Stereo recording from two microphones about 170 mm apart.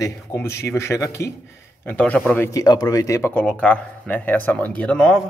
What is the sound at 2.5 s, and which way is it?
Speech, 20° left (ahead or behind).